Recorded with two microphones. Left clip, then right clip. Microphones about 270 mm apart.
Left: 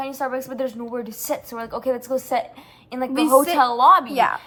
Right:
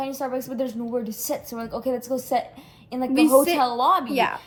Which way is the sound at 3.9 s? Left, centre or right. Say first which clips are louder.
Left 6 dB; centre.